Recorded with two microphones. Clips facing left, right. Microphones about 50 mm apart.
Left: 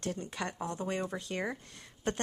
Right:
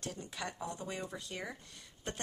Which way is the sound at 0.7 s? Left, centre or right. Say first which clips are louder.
Left 7 dB; left.